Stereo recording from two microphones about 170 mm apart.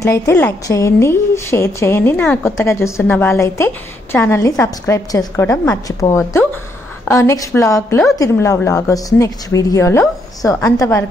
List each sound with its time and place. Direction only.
0.0 s a woman's voice: 15° left (ahead or behind)